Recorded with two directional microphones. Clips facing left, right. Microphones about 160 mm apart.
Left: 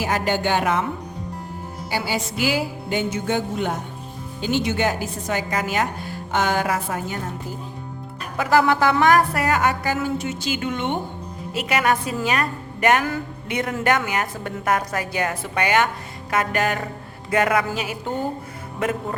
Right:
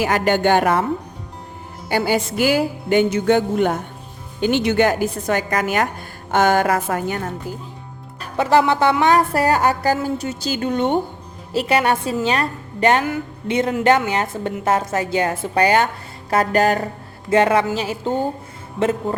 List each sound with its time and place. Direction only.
0.0 s music: 65° right (ahead or behind); by 0.9 s 50° right (ahead or behind)
1.9 s music: 55° right (ahead or behind)
3.1 s speech: 65° right (ahead or behind)
6.3 s music: 50° right (ahead or behind)
8.2 s music: 25° right (ahead or behind)
13.5 s a woman's voice: 25° right (ahead or behind)
16.3 s music: 35° right (ahead or behind)
17.2 s a woman's voice: 30° right (ahead or behind)